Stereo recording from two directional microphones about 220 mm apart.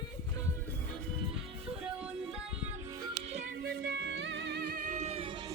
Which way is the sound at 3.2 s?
30° right (ahead or behind).